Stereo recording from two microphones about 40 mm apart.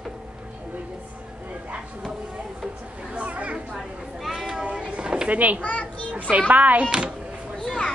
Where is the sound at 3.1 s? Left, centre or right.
Right.